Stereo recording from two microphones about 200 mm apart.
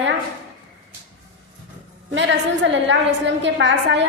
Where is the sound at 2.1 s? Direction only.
65° right (ahead or behind).